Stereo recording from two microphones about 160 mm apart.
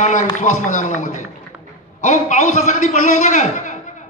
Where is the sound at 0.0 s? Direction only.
50° left (ahead or behind).